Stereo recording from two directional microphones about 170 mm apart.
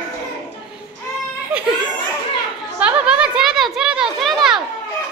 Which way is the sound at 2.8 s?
5° right (ahead or behind).